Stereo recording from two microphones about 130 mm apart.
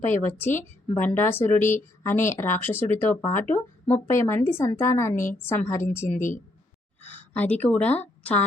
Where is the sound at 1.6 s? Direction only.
75° left (ahead or behind).